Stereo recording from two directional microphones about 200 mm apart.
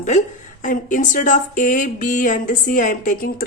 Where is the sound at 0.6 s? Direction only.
40° left (ahead or behind).